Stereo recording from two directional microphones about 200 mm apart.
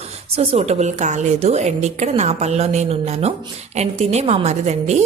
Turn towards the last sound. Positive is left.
turn(degrees=-35)  # may be behind; listen again after turning